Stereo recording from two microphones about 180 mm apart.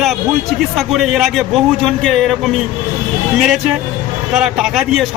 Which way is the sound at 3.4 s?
Centre (ahead or behind).